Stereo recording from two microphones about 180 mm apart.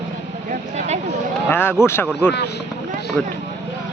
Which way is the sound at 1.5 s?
10° left (ahead or behind).